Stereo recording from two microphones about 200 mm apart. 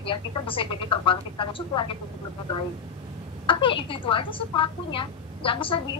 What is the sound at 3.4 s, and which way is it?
A woman's voice, 25° left (ahead or behind).